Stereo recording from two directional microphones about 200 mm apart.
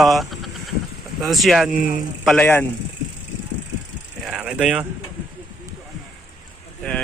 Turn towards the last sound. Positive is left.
turn(degrees=5)  # may be behind; listen again after turning